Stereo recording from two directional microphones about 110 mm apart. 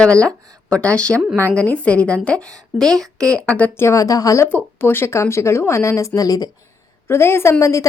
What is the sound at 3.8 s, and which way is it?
Speech, 30° left (ahead or behind).